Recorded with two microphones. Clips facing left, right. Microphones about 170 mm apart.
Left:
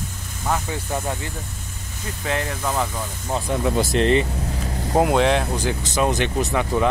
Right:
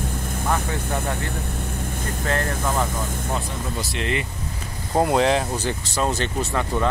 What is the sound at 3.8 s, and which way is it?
Speech, 45° left (ahead or behind).